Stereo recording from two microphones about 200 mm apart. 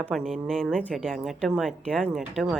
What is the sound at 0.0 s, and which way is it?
Speech, centre (ahead or behind).